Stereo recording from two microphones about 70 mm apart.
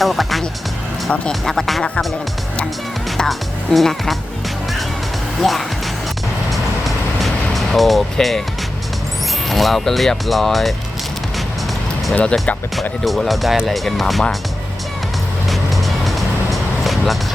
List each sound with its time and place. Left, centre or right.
0.0 s music: centre
1.3 s speech: centre
3.2 s speech: centre
5.4 s speech: centre
6.5 s vehicle: centre
9.5 s speech: centre
12.1 s speech: centre
13.1 s speech: centre
15.4 s music: centre